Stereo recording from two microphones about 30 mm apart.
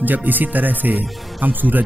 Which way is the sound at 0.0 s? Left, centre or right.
Right.